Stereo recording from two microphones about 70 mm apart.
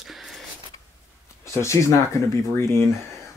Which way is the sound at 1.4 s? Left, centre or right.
Left.